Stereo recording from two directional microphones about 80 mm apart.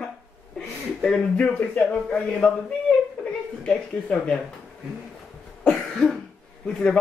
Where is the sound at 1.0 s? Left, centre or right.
Centre.